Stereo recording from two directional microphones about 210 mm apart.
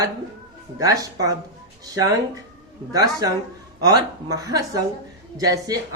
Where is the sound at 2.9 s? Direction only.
15° right (ahead or behind).